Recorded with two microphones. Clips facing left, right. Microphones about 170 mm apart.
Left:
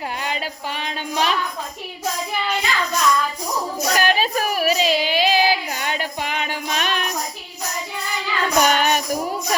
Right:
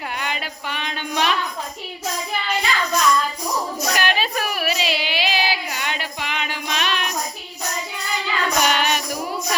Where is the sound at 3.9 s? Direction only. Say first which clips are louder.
Left 4 dB; 40° left (ahead or behind).